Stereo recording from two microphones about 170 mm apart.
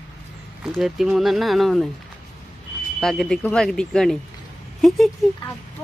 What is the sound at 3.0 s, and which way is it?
Speech, centre (ahead or behind).